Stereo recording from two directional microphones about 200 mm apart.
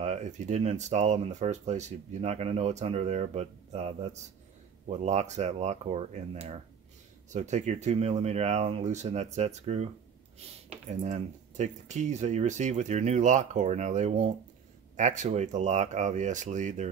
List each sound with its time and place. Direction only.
0.0 s speech: 35° right (ahead or behind)
7.2 s speech: 35° right (ahead or behind)
10.9 s speech: 35° right (ahead or behind)